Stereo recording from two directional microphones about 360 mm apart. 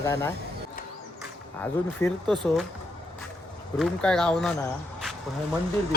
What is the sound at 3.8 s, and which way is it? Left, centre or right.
Speech, centre.